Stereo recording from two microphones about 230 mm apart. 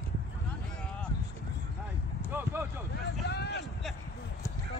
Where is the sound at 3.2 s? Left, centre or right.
Left.